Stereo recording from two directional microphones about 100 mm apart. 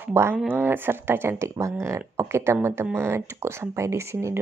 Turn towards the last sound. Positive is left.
turn(degrees=-30)  # may be behind; listen again after turning